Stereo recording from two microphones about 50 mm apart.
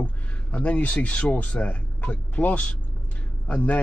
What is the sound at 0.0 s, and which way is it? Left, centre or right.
Speech, left.